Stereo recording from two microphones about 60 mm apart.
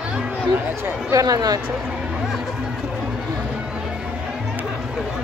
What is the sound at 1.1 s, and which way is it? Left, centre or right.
Speech, right.